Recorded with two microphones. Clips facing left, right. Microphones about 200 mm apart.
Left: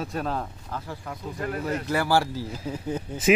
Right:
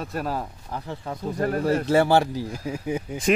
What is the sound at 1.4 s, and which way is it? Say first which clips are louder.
A man's voice: right 6 dB; 40° right (ahead or behind).